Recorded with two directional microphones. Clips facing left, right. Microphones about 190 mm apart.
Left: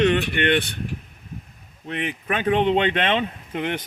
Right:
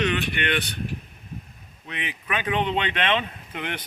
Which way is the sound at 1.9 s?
50° left (ahead or behind).